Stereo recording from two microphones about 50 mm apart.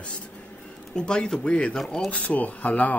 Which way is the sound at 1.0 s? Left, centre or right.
Centre.